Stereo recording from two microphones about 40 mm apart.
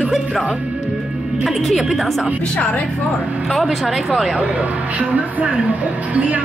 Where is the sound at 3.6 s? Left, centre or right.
Centre.